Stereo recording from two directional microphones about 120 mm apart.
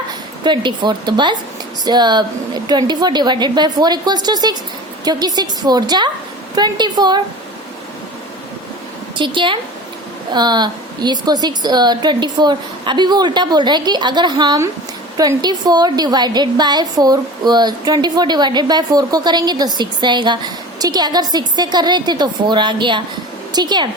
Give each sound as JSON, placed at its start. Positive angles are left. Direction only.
{"t": 0.4, "sound": "a woman's voice", "side_deg": -40}
{"t": 9.1, "sound": "a woman's voice", "side_deg": -45}